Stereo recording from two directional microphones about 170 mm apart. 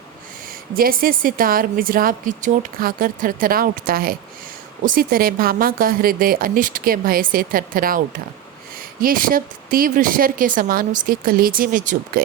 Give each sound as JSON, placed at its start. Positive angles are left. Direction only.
{"t": 0.7, "sound": "a woman's voice", "side_deg": -60}